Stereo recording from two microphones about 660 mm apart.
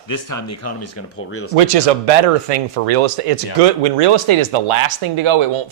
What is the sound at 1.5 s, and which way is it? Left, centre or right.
Speech, right.